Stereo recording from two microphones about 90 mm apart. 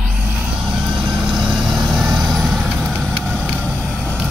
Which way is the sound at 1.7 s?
5° right (ahead or behind).